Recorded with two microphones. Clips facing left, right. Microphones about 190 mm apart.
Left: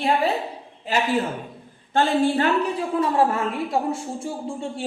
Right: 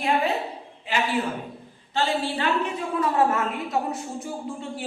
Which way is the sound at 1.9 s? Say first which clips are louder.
Left 6 dB; 50° left (ahead or behind).